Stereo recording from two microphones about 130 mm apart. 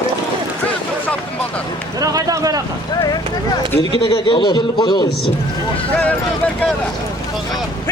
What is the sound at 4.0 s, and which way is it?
A man's voice, 40° left (ahead or behind).